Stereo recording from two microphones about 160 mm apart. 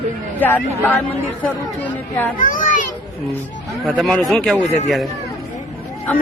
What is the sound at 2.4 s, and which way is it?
Children playing, 55° left (ahead or behind).